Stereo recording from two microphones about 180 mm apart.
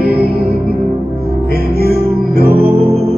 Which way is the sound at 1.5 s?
60° right (ahead or behind).